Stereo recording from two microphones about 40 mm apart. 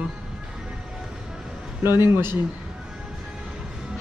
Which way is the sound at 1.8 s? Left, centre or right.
Right.